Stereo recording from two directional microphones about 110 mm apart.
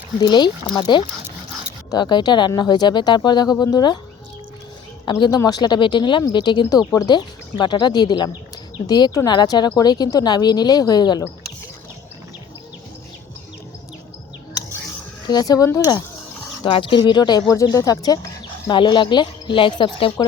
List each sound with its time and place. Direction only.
0.2 s speech: 40° left (ahead or behind)
5.1 s speech: 45° left (ahead or behind)
15.3 s speech: 35° left (ahead or behind)
16.6 s speech: 45° left (ahead or behind)
17.5 s speech: 30° left (ahead or behind)
18.7 s speech: 45° left (ahead or behind)